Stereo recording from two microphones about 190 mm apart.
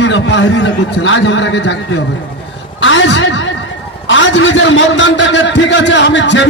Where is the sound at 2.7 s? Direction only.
90° left.